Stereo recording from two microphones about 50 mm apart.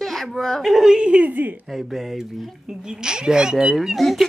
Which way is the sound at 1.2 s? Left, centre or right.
Right.